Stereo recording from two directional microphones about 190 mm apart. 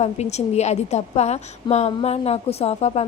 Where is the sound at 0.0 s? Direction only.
35° left (ahead or behind).